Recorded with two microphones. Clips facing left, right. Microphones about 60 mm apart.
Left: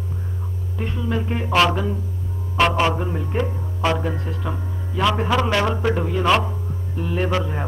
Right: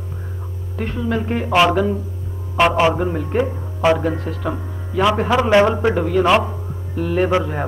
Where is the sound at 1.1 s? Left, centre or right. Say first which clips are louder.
Right 3 dB; right.